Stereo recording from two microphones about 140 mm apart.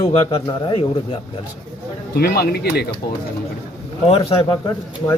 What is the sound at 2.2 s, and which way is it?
Speech, 90° left.